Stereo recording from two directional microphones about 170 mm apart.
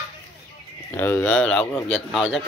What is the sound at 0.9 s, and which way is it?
A man's voice, 15° left (ahead or behind).